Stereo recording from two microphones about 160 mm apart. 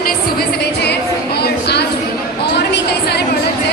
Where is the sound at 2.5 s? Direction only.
90° left.